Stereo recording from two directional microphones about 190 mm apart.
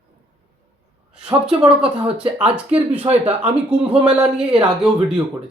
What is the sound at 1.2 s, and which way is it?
Speech, 5° right (ahead or behind).